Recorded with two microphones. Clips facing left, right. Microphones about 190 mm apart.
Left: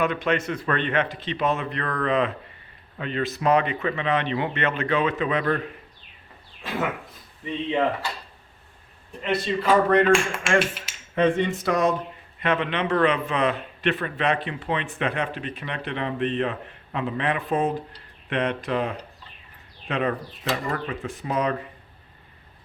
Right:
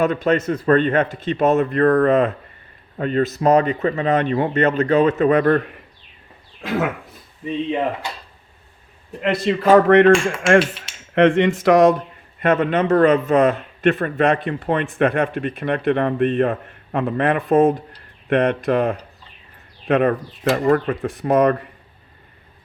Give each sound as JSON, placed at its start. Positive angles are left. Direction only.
{"t": 0.0, "sound": "a man's voice", "side_deg": -40}
{"t": 9.2, "sound": "speech", "side_deg": -90}
{"t": 11.1, "sound": "speech", "side_deg": -85}
{"t": 12.4, "sound": "a man's voice", "side_deg": -45}